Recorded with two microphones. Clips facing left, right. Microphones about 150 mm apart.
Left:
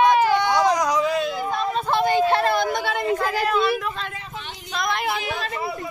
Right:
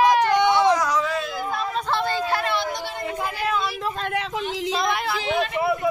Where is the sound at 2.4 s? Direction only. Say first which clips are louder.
Left 4 dB; 50° left (ahead or behind).